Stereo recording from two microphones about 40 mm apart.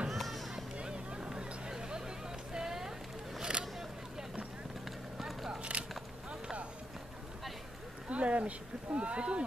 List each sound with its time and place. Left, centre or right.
0.1 s run: centre
0.7 s a sound: right
3.5 s vehicle: right
5.1 s biting: centre
5.6 s a sound: right
8.1 s speech: right